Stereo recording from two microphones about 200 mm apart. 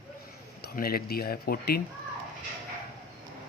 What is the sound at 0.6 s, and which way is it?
Speech, 50° left (ahead or behind).